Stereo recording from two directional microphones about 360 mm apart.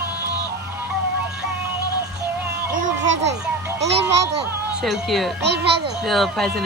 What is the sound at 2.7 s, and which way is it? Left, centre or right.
Children playing, right.